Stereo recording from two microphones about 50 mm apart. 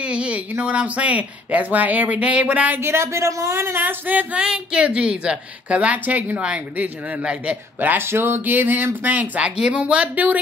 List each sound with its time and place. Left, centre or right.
0.0 s a sound: right
0.5 s speech: right
2.8 s speech: right
3.8 s speech: right
4.4 s a woman's voice: right
8.0 s speech: right
8.5 s speech: right
9.6 s a woman's voice: right